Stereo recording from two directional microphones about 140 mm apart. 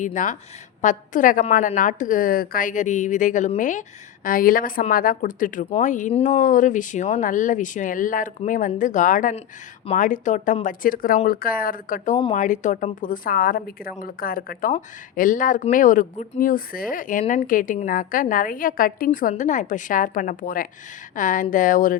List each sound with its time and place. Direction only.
0.0 s a woman's voice: 65° left (ahead or behind)
12.3 s a woman's voice: 65° left (ahead or behind); by 14.7 s 90° left
14.7 s a woman's voice: 70° left (ahead or behind)
16.4 s a woman's voice: 85° left
19.3 s a woman's voice: 65° left (ahead or behind)